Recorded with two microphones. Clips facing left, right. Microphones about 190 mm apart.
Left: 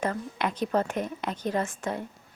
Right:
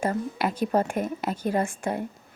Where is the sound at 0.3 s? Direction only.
5° right (ahead or behind).